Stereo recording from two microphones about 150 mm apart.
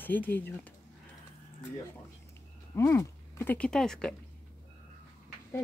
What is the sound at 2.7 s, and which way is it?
Speech, 20° left (ahead or behind).